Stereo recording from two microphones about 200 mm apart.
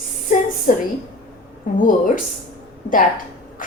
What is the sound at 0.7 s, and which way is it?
Speech, 40° left (ahead or behind).